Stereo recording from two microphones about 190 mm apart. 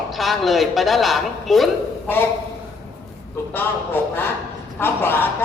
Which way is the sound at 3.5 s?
10° left (ahead or behind).